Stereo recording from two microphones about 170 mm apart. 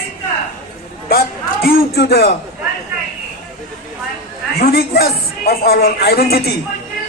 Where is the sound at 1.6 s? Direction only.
65° left (ahead or behind).